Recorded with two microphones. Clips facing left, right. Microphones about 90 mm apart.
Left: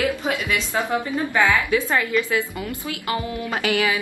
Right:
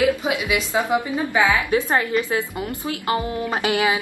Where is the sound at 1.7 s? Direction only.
30° right (ahead or behind).